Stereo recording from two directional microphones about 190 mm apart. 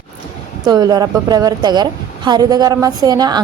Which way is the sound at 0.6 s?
20° right (ahead or behind).